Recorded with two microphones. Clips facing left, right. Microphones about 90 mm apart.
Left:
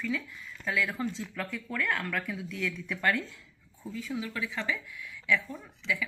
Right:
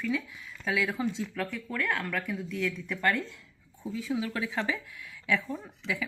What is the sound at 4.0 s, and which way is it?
Speech, 20° right (ahead or behind).